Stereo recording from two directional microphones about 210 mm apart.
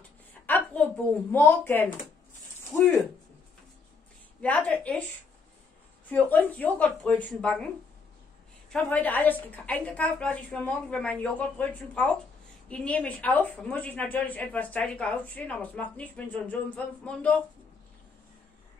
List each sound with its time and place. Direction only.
0.5 s a sound: 5° left (ahead or behind)
1.3 s a woman's voice: 10° left (ahead or behind)
4.4 s a woman's voice: 5° left (ahead or behind)
6.0 s a woman's voice: 10° left (ahead or behind)